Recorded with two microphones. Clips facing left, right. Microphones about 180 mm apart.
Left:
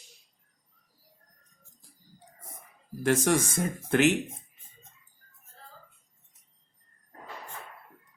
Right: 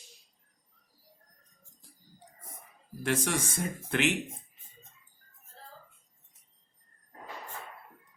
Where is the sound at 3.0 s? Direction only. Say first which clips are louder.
Left 6 dB; 45° left (ahead or behind).